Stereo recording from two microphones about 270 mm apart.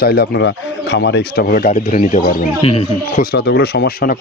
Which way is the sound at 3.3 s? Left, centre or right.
Left.